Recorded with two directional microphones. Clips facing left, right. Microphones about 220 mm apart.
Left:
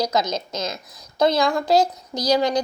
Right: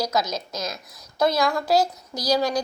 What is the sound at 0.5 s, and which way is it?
Speech, centre (ahead or behind).